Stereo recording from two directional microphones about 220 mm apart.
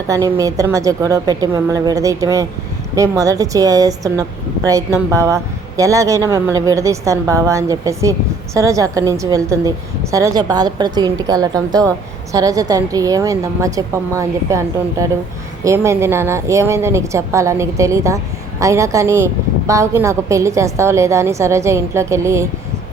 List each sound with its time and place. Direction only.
0.1 s a woman's voice: 15° right (ahead or behind)